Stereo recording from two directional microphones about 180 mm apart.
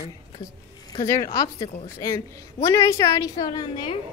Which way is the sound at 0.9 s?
20° left (ahead or behind).